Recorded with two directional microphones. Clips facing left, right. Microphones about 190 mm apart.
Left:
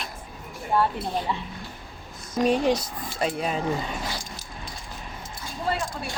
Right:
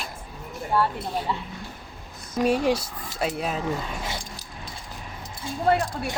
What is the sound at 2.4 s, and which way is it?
Speech, 5° right (ahead or behind).